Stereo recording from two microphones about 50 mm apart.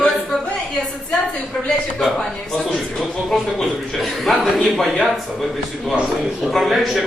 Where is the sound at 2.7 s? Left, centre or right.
Centre.